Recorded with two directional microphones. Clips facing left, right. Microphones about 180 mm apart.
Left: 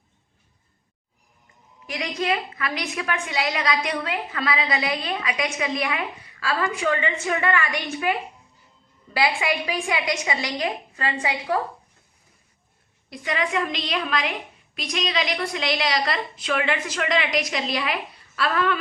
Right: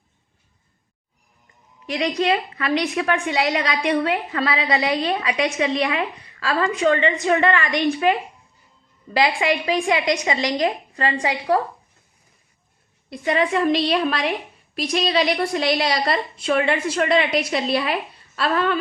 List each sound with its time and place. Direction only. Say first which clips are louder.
1.9 s a woman's voice: right 5 dB; 35° right (ahead or behind)
9.2 s a woman's voice: right 3 dB; 35° right (ahead or behind)
13.1 s a woman's voice: right 6 dB; 30° right (ahead or behind)